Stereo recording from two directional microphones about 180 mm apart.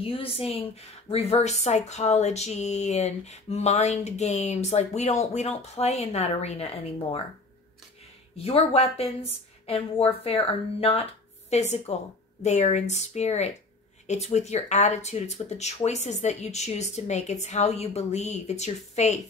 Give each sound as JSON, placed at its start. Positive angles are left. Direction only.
{"t": 0.0, "sound": "speech", "side_deg": 30}
{"t": 8.5, "sound": "speech", "side_deg": 35}